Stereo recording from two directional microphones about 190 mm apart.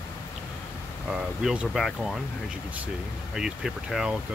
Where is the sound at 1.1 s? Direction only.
5° right (ahead or behind).